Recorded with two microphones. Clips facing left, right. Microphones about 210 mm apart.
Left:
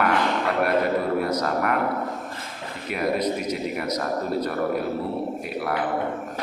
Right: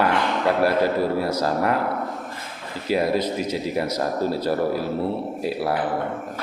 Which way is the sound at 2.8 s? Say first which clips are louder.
Right 3 dB; 30° right (ahead or behind).